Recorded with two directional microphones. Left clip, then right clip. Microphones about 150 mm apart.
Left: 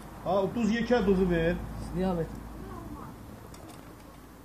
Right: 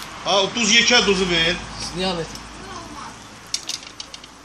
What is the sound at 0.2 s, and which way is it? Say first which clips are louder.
Speech: right 9 dB; 5° left (ahead or behind).